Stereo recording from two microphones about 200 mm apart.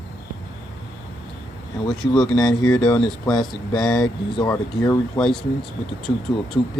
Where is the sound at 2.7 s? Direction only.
5° left (ahead or behind).